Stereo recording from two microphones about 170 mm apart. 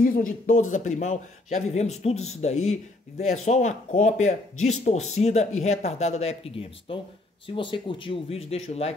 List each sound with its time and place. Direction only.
0.0 s speech: 55° left (ahead or behind); by 8.9 s 40° left (ahead or behind)